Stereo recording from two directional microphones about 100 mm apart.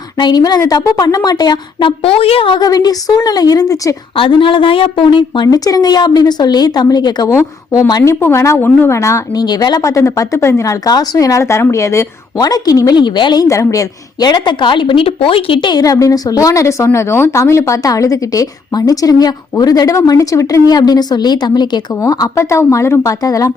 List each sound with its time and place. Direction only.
0.2 s a woman's voice: 45° left (ahead or behind)
2.0 s a woman's voice: 75° left (ahead or behind)
2.6 s a woman's voice: 40° left (ahead or behind)
4.1 s a woman's voice: 60° left (ahead or behind)
5.5 s a woman's voice: 40° left (ahead or behind)
7.3 s a woman's voice: 30° left (ahead or behind)
9.4 s a woman's voice: 45° left (ahead or behind); by 12.0 s 30° left (ahead or behind)
12.4 s a woman's voice: 40° left (ahead or behind); by 15.7 s 65° left (ahead or behind)
15.7 s a woman's voice: 35° left (ahead or behind)
20.7 s a woman's voice: 40° left (ahead or behind)